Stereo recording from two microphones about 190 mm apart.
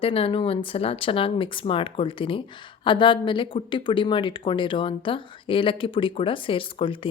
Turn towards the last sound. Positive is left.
turn(degrees=30)  # may be behind; listen again after turning